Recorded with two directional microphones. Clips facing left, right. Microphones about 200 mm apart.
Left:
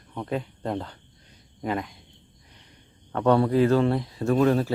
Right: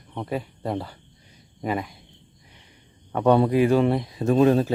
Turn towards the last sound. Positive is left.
turn(degrees=-20)  # may be behind; listen again after turning